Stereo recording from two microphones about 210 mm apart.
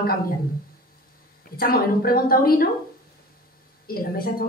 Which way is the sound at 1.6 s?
45° left (ahead or behind).